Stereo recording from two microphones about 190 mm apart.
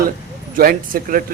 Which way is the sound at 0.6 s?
50° right (ahead or behind).